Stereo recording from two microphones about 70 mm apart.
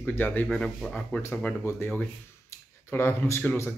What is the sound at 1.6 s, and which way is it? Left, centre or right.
Speech, left.